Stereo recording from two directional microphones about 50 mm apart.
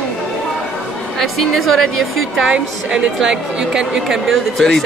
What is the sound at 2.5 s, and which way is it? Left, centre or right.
Speech, right.